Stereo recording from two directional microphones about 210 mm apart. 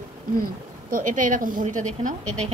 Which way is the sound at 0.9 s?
40° right (ahead or behind).